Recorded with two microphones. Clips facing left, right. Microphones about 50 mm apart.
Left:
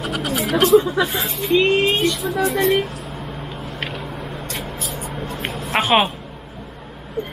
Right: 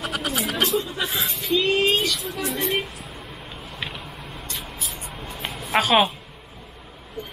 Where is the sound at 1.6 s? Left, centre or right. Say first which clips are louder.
Left 3 dB; left.